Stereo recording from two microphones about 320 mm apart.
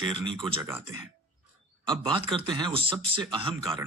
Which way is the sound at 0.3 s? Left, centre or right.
Centre.